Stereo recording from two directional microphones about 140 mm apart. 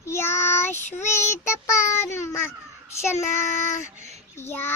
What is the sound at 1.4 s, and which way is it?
Child singing, 20° left (ahead or behind).